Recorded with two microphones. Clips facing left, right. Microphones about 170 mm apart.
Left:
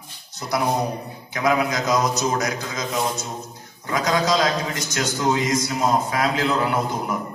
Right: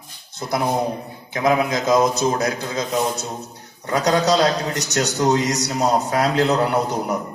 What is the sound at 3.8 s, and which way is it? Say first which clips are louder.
A man's voice: right 3 dB; 35° right (ahead or behind).